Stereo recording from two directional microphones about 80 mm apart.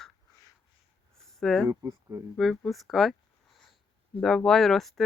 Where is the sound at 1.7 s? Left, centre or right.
Right.